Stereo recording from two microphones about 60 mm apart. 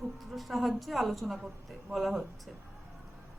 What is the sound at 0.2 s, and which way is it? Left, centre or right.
Speech, centre.